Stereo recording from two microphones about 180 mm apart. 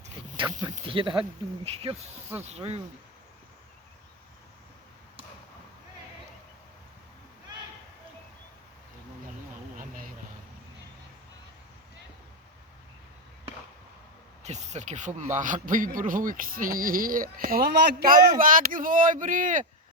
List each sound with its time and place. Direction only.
0.6 s speech: 30° right (ahead or behind)
9.7 s vehicle: 50° right (ahead or behind)
14.4 s a man's voice: 40° right (ahead or behind)